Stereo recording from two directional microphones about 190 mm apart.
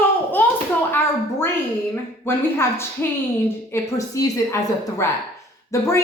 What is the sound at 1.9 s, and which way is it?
A woman's voice, 15° left (ahead or behind).